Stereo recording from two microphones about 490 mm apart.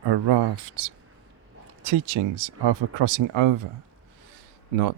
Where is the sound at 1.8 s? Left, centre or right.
Right.